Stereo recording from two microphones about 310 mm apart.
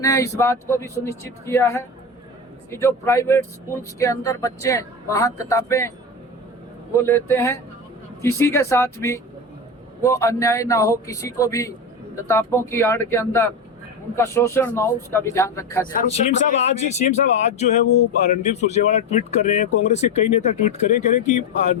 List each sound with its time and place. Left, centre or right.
0.0 s speech: centre
6.9 s speech: centre
15.9 s speech: left